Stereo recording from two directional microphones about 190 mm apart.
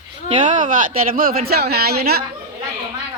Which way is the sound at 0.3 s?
35° right (ahead or behind).